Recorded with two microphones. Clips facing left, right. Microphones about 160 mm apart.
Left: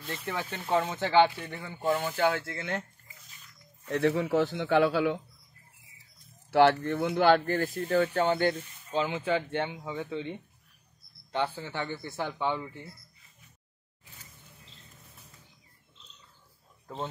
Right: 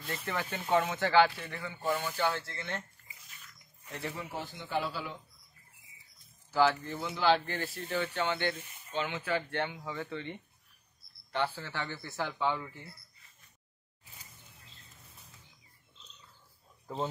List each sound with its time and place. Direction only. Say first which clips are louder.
0.0 s speech: left 1 dB; centre (ahead or behind)
0.9 s speech: left 4 dB; 20° left (ahead or behind)
1.9 s speech: left 5 dB; 50° left (ahead or behind)
3.8 s a man's voice: left 13 dB; 75° left (ahead or behind)
6.5 s speech: left 6 dB; 65° left (ahead or behind); by 12.9 s 20° left (ahead or behind)
16.8 s a man's voice: right 2 dB; 5° right (ahead or behind)